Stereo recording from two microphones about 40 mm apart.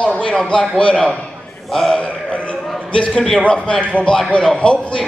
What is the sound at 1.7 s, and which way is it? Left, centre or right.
Speech, centre.